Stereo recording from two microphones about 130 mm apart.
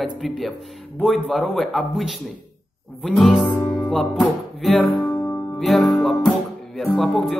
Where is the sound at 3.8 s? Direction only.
Centre (ahead or behind).